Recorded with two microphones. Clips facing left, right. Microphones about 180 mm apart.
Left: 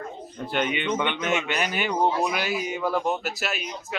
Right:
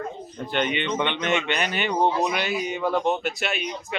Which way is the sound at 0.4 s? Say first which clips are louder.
Even; 5° left (ahead or behind).